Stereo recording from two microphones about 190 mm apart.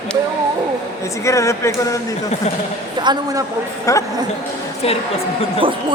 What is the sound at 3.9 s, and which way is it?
Speech, 15° left (ahead or behind).